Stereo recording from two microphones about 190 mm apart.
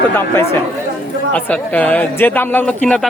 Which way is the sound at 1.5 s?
10° left (ahead or behind).